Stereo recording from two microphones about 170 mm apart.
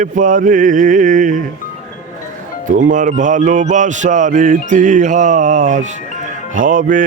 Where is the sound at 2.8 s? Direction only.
50° right (ahead or behind).